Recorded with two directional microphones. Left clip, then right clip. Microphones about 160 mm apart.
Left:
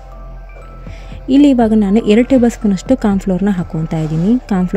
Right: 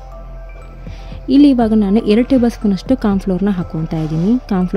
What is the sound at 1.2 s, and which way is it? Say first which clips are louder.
A woman's voice: left 1 dB; 15° left (ahead or behind).